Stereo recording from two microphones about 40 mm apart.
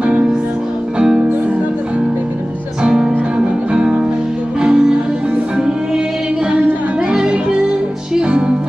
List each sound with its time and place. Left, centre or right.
0.0 s music: right
2.8 s music: centre
7.1 s music: right